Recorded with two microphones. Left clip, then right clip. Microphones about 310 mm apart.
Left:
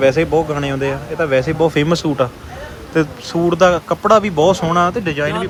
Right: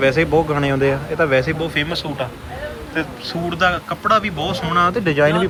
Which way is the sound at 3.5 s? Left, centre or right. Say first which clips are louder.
Left 5 dB; centre.